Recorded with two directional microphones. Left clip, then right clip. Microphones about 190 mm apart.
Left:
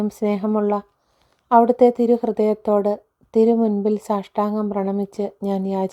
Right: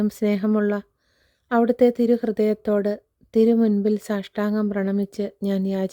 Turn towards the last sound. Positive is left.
turn(degrees=-25)  # may be behind; listen again after turning